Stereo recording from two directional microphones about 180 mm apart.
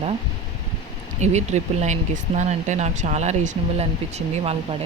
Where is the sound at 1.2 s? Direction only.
40° right (ahead or behind).